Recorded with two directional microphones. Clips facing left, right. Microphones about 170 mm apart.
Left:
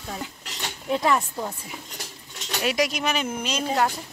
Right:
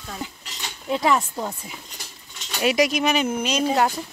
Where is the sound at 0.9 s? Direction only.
15° right (ahead or behind).